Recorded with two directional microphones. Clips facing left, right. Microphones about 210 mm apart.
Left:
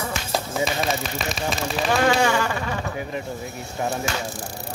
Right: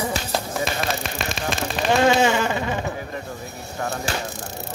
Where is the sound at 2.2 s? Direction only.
20° right (ahead or behind).